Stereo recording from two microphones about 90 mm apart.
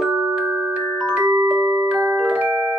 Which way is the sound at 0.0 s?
10° right (ahead or behind).